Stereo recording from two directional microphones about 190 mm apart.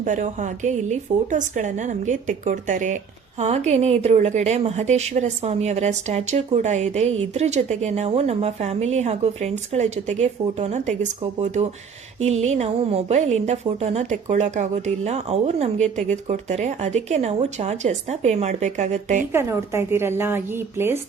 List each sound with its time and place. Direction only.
0.0 s a woman's voice: 40° right (ahead or behind)
19.3 s a woman's voice: 15° right (ahead or behind)